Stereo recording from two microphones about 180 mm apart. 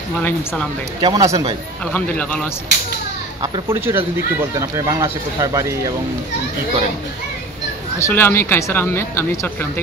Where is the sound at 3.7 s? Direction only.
10° right (ahead or behind).